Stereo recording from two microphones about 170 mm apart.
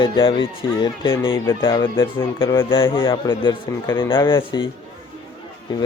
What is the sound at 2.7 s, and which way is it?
Speech, 30° left (ahead or behind).